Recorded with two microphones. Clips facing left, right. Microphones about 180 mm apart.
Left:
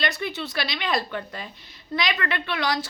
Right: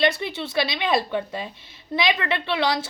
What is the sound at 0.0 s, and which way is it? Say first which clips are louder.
A woman's voice: right 5 dB; 25° right (ahead or behind).